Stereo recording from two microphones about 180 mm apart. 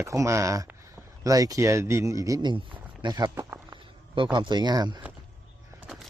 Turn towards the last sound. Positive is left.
turn(degrees=-25)  # may be behind; listen again after turning